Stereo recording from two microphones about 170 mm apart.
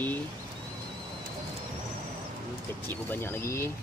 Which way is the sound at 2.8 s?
10° left (ahead or behind).